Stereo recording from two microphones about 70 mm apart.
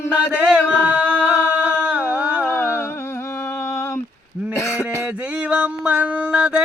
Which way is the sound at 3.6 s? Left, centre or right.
Left.